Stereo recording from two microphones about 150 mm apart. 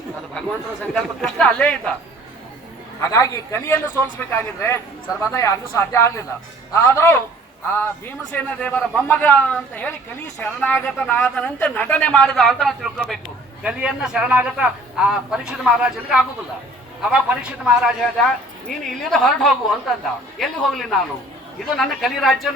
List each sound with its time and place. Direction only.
0.9 s speech: 5° left (ahead or behind)
3.0 s a man's voice: 20° left (ahead or behind); by 22.4 s centre (ahead or behind)